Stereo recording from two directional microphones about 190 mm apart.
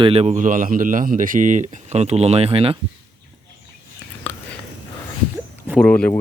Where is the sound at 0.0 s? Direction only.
30° right (ahead or behind).